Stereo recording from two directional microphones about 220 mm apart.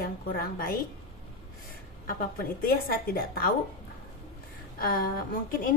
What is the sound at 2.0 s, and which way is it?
A woman's voice, 40° left (ahead or behind).